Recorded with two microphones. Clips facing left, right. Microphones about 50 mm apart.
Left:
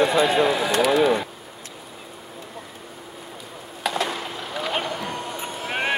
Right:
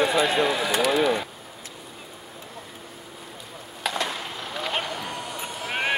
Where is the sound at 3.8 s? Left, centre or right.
Centre.